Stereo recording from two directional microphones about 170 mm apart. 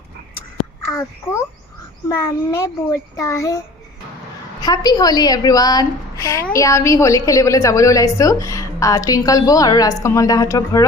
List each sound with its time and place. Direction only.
2.0 s a child's voice: 15° left (ahead or behind)
4.6 s a woman's voice: 20° left (ahead or behind)